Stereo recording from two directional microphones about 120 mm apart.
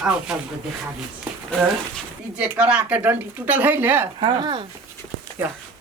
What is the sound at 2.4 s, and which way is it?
Speech, 10° right (ahead or behind).